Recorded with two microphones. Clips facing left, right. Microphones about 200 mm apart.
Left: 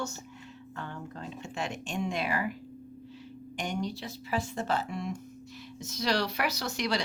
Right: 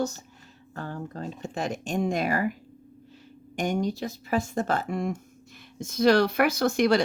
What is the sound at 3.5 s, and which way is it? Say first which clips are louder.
Speech: right 7 dB; 45° right (ahead or behind).